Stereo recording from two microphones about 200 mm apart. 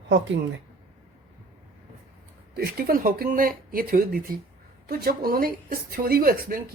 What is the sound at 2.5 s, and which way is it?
Speech, 50° right (ahead or behind).